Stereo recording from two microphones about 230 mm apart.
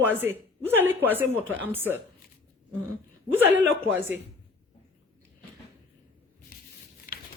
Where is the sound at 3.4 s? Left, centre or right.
Right.